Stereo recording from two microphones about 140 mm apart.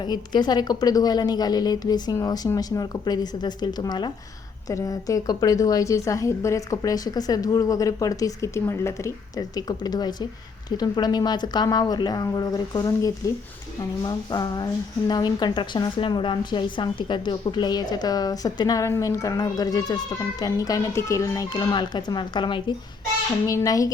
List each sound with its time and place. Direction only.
0.0 s a woman's voice: 30° left (ahead or behind)
23.5 s a woman's voice: 25° left (ahead or behind)